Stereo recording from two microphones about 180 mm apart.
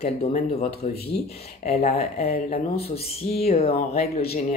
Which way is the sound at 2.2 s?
55° left (ahead or behind).